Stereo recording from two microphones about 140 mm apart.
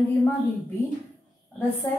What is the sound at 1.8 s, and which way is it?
Speech, 15° left (ahead or behind).